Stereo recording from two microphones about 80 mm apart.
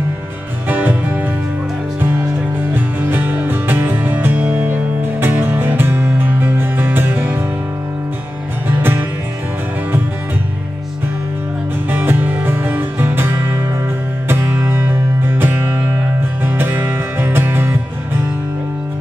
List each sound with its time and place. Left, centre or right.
0.7 s music: right
2.7 s music: right
8.6 s music: right
11.9 s music: right